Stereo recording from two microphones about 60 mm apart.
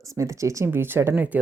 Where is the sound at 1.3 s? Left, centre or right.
Right.